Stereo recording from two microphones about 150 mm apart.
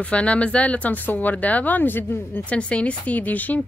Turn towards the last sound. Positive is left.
turn(degrees=10)  # may be behind; listen again after turning